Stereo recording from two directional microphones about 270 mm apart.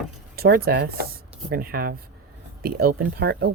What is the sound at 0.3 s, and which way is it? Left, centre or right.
Speech, right.